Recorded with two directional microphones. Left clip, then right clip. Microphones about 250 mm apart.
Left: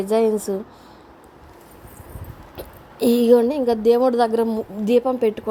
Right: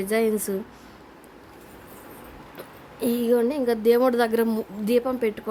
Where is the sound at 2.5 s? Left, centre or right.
Left.